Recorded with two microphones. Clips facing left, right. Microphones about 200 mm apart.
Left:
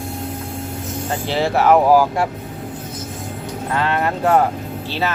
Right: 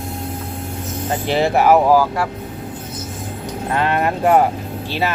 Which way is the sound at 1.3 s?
15° right (ahead or behind).